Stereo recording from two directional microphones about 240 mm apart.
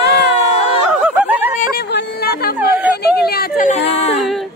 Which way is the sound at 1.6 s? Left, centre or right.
Left.